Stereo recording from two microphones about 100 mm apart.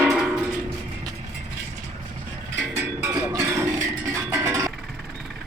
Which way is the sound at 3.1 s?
35° right (ahead or behind).